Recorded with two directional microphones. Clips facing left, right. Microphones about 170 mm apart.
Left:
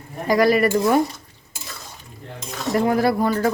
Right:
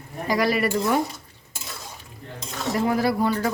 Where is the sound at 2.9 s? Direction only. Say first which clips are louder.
Left 3 dB; 50° left (ahead or behind).